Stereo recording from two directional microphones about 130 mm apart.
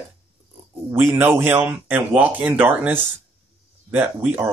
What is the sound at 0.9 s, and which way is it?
Speech, 20° right (ahead or behind).